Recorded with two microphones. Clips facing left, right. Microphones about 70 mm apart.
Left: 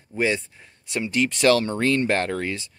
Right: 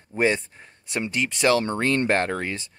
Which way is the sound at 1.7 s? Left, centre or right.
Right.